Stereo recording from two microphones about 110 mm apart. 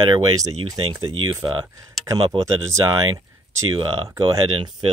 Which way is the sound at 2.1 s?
25° right (ahead or behind).